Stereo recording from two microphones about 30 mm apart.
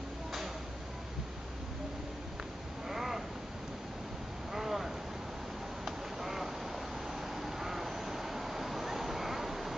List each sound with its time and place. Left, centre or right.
2.9 s crow: centre
4.6 s a sound: centre
5.9 s duck: centre